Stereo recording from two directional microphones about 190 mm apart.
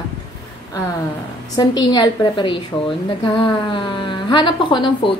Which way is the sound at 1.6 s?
20° left (ahead or behind).